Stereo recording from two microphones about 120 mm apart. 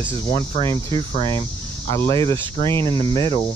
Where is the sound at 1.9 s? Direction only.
25° left (ahead or behind).